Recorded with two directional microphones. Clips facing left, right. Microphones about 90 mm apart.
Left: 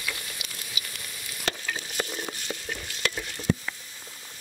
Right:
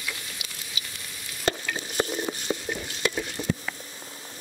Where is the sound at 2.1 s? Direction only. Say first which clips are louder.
Right 6 dB; 10° right (ahead or behind).